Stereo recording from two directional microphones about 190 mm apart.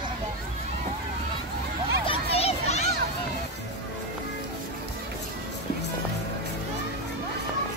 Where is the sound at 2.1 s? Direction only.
30° left (ahead or behind).